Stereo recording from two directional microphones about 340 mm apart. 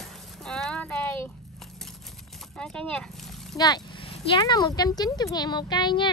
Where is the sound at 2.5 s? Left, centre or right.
Centre.